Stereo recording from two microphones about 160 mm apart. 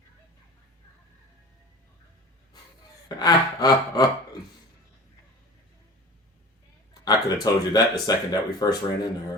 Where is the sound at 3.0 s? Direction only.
25° left (ahead or behind).